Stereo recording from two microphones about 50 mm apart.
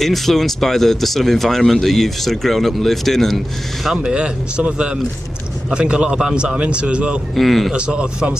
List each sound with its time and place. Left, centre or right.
0.0 s speech: centre
3.9 s speech: right
7.3 s speech: centre
7.7 s speech: right